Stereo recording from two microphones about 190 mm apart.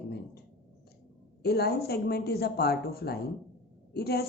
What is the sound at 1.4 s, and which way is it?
Speech, 55° left (ahead or behind).